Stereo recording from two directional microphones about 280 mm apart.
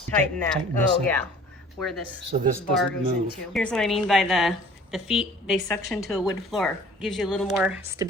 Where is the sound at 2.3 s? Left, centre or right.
Right.